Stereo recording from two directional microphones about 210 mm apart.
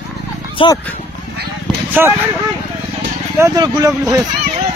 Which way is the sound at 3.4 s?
15° right (ahead or behind).